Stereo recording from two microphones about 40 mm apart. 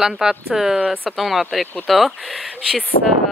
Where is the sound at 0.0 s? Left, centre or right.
Centre.